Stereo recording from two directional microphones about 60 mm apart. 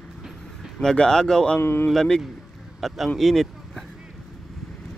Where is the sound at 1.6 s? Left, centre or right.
Left.